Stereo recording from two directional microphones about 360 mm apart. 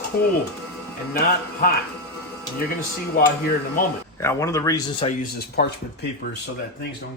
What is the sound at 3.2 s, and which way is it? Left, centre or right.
Speech, left.